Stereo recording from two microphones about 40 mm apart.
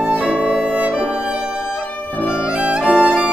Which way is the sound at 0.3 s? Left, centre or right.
Right.